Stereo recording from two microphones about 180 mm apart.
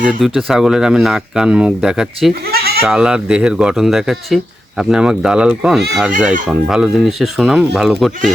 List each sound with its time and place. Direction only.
0.0 s speech: 5° right (ahead or behind)
2.5 s bleat: 60° right (ahead or behind)
2.8 s speech: 5° right (ahead or behind)